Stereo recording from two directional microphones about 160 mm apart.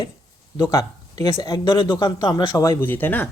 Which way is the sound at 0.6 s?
20° left (ahead or behind).